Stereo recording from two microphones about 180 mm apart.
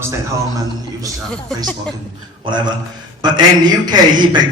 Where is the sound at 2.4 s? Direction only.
25° right (ahead or behind).